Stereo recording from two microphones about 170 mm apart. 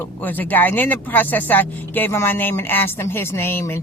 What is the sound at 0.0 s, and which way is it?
A woman's voice, 10° left (ahead or behind).